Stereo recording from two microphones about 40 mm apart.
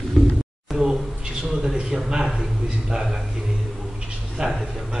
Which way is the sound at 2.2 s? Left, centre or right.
Centre.